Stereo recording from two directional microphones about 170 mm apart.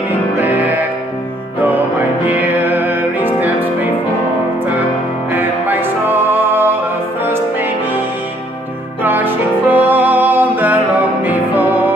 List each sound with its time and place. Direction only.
0.4 s music: 10° right (ahead or behind)
2.2 s music: 10° right (ahead or behind)
5.3 s music: 10° right (ahead or behind)
9.0 s music: 10° right (ahead or behind)